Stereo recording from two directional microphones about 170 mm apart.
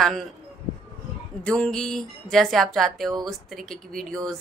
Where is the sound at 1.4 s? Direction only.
5° left (ahead or behind).